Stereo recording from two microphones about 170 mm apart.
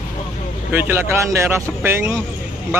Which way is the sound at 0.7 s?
15° right (ahead or behind).